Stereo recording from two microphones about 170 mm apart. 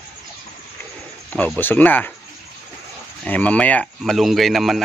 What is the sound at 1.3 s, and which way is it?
Speech, 10° left (ahead or behind).